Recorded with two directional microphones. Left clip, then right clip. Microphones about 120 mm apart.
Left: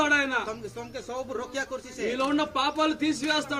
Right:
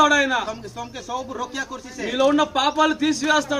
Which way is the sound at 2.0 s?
10° right (ahead or behind).